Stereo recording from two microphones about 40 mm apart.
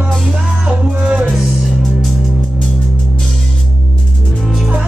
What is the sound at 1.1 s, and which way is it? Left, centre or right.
Music, right.